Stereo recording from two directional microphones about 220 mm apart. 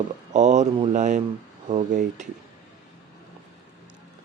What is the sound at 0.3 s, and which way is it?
Speech, 30° right (ahead or behind).